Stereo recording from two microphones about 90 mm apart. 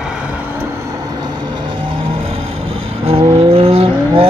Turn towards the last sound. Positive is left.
turn(degrees=-90)